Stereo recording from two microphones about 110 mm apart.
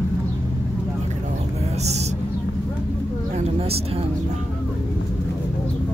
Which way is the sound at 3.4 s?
65° right (ahead or behind).